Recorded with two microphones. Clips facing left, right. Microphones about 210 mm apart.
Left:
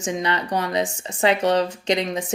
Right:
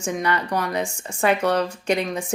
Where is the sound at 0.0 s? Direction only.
20° left (ahead or behind).